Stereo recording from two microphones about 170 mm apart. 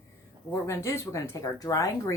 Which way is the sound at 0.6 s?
15° left (ahead or behind).